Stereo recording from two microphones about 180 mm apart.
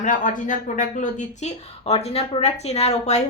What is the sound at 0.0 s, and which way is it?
Speech, 45° left (ahead or behind).